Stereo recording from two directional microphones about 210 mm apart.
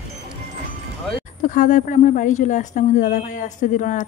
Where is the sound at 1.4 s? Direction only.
35° left (ahead or behind).